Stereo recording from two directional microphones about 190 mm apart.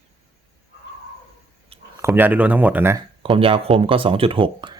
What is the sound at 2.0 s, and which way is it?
Speech, 10° right (ahead or behind).